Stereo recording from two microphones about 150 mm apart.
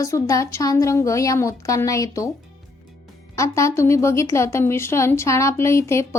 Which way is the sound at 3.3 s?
20° left (ahead or behind).